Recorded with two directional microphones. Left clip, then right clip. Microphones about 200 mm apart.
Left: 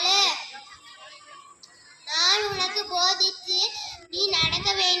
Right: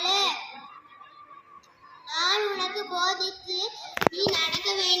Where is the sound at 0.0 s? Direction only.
20° left (ahead or behind).